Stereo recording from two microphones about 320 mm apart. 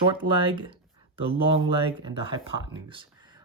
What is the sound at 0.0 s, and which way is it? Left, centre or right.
Speech, centre.